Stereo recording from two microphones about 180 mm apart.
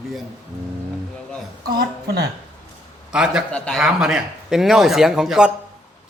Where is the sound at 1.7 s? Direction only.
60° right (ahead or behind).